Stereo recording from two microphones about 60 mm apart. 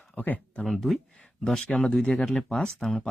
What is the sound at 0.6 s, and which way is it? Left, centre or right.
Speech, centre.